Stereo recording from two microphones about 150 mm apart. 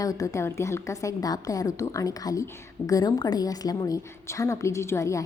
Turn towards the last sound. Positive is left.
turn(degrees=20)  # may be behind; listen again after turning